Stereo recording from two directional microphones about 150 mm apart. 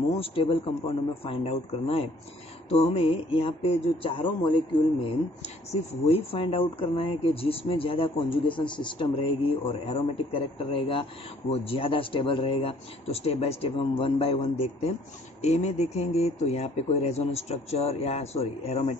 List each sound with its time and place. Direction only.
0.2 s speech: 40° left (ahead or behind)